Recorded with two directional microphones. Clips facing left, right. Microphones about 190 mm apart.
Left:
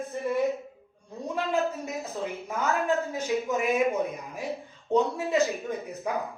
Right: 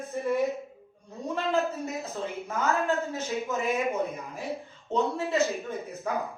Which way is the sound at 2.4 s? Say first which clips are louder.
Right 1 dB; 15° left (ahead or behind).